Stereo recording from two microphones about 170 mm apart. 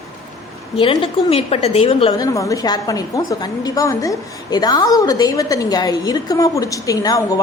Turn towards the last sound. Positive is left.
turn(degrees=20)  # may be behind; listen again after turning